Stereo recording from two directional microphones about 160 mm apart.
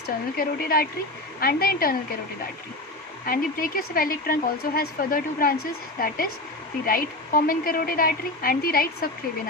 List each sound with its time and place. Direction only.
0.3 s a woman's voice: 65° left (ahead or behind)
3.2 s a woman's voice: 65° left (ahead or behind)